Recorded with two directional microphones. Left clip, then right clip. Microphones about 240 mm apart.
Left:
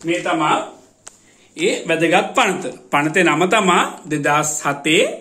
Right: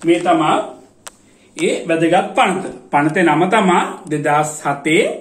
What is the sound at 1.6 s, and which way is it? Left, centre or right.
Speech, left.